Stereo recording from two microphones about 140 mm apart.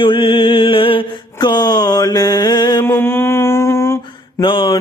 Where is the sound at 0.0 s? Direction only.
35° left (ahead or behind).